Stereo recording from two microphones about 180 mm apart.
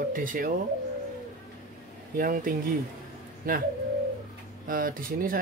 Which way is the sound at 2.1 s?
50° right (ahead or behind).